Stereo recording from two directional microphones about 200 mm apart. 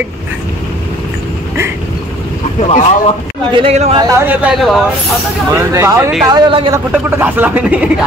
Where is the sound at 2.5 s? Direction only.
30° left (ahead or behind).